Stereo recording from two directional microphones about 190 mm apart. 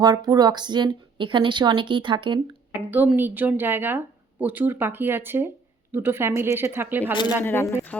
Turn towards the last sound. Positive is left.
turn(degrees=10)  # may be behind; listen again after turning